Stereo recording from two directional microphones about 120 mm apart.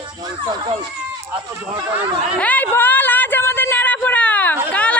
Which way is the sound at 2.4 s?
15° left (ahead or behind).